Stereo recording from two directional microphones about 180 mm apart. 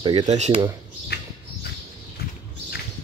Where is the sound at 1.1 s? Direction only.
60° left (ahead or behind).